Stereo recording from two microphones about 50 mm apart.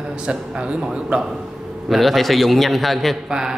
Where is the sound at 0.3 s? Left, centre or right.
Centre.